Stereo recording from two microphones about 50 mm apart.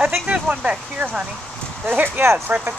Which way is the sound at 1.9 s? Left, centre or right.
Right.